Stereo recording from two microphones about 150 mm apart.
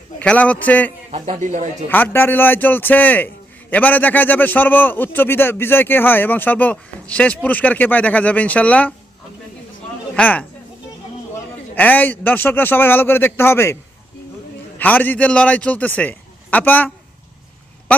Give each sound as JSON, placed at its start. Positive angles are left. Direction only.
{"t": 0.2, "sound": "a man's voice", "side_deg": 10}
{"t": 1.1, "sound": "speech", "side_deg": -50}
{"t": 1.9, "sound": "a man's voice", "side_deg": 15}
{"t": 10.2, "sound": "a man's voice", "side_deg": 10}
{"t": 11.7, "sound": "a man's voice", "side_deg": 10}
{"t": 14.8, "sound": "a man's voice", "side_deg": 10}